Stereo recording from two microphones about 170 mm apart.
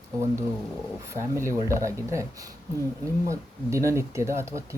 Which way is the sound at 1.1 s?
15° right (ahead or behind).